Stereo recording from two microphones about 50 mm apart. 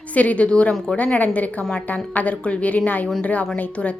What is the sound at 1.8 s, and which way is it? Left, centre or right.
A woman's voice, left.